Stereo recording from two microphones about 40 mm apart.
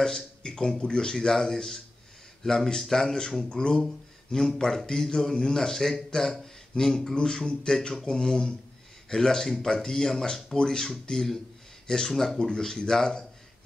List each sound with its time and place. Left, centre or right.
0.0 s speech: centre